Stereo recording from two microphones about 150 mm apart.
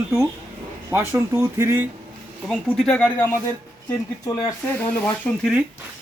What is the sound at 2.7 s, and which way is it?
Speech, 5° left (ahead or behind).